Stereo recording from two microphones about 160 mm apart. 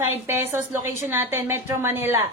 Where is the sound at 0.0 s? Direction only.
15° right (ahead or behind).